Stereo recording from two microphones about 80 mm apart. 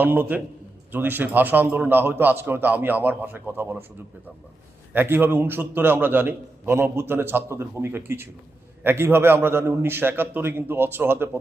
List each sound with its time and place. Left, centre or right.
0.0 s a man's voice: right
4.9 s a man's voice: right